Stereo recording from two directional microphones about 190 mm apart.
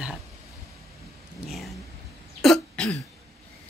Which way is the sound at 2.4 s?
5° left (ahead or behind).